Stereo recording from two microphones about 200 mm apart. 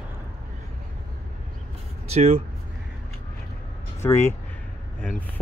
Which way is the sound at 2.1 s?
30° right (ahead or behind).